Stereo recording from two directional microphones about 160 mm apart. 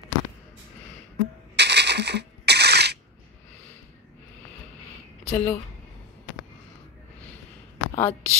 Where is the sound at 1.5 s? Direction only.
90° right.